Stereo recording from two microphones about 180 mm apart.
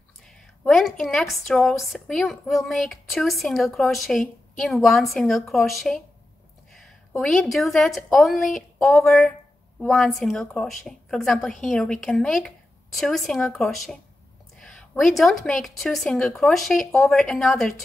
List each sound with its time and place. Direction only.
0.7 s a woman's voice: centre (ahead or behind)